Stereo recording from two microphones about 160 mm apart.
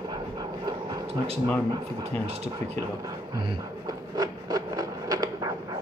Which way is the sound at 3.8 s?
25° right (ahead or behind).